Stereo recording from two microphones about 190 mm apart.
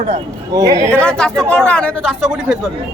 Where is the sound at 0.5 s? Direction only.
15° right (ahead or behind).